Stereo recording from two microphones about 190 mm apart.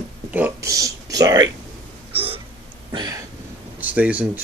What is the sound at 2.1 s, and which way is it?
Hiccup, 30° right (ahead or behind).